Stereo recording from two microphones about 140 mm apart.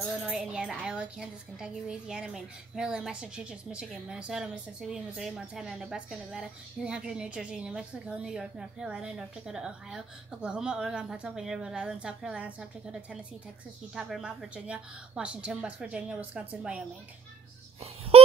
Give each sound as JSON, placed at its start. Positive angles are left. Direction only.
{"t": 0.0, "sound": "speech", "side_deg": -5}
{"t": 13.9, "sound": "a woman's voice", "side_deg": 0}
{"t": 18.1, "sound": "a sound", "side_deg": -45}